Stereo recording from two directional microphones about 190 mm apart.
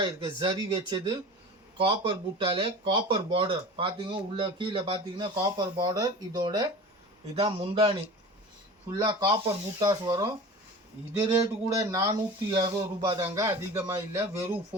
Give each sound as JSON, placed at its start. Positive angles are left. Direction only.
{"t": 0.0, "sound": "speech", "side_deg": -25}
{"t": 9.0, "sound": "speech", "side_deg": -20}